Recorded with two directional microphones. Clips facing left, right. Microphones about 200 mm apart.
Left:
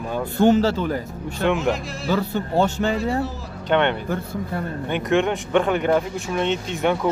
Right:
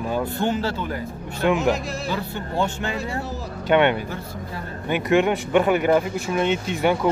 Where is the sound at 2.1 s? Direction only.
45° left (ahead or behind).